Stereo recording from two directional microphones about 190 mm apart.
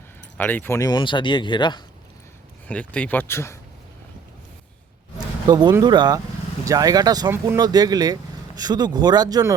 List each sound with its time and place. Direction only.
0.3 s speech: 10° left (ahead or behind); by 1.8 s 25° left (ahead or behind)
2.6 s speech: 5° left (ahead or behind)
5.1 s a sound: 20° right (ahead or behind)
5.8 s speech: 25° right (ahead or behind)